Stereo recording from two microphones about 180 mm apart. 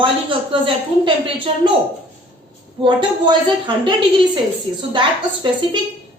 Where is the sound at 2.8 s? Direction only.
25° right (ahead or behind).